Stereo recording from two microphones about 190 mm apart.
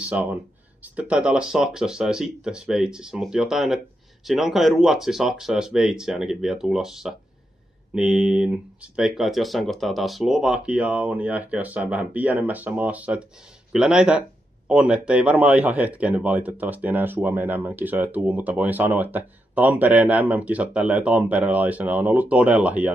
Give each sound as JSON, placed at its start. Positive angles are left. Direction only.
{"t": 0.0, "sound": "speech", "side_deg": -10}